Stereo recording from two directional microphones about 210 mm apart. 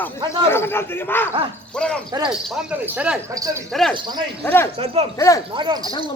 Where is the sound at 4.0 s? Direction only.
20° right (ahead or behind).